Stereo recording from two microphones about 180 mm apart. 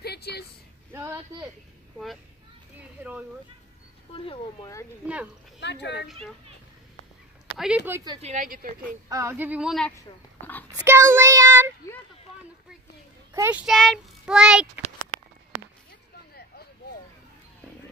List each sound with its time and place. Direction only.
0.0 s a sound: 65° left (ahead or behind)
4.1 s speech: 30° left (ahead or behind)
5.0 s speech: 5° right (ahead or behind)
5.6 s speech: 75° left (ahead or behind)
7.5 s speech: 5° right (ahead or behind)
8.2 s speech: 45° right (ahead or behind)
9.1 s speech: 15° right (ahead or behind); by 10.6 s 10° left (ahead or behind)
10.8 s child singing: 15° right (ahead or behind)
13.3 s a child's voice: 10° right (ahead or behind)
13.7 s child singing: centre (ahead or behind)